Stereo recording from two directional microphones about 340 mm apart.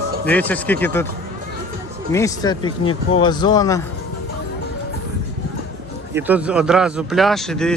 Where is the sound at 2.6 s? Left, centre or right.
Left.